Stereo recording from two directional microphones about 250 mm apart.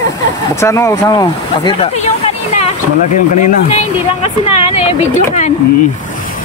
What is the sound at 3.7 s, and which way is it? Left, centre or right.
Speech, left.